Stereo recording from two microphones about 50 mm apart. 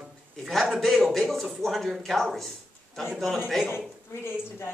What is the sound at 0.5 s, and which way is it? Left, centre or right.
Speech, centre.